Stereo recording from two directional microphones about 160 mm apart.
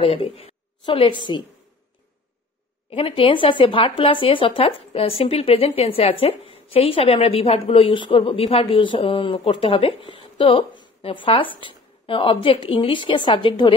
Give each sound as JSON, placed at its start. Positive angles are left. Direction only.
{"t": 0.0, "sound": "a woman's voice", "side_deg": 35}
{"t": 2.9, "sound": "speech", "side_deg": 35}